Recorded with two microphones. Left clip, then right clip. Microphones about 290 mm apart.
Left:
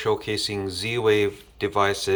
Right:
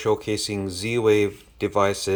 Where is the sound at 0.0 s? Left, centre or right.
Right.